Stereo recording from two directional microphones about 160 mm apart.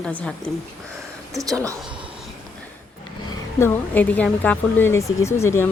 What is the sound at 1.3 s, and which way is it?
Speech, 20° right (ahead or behind).